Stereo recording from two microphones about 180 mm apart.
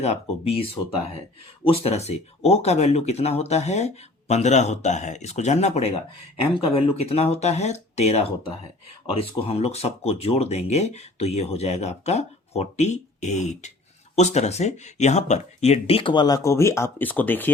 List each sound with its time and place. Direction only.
0.0 s speech: 35° left (ahead or behind); by 17.5 s 10° left (ahead or behind)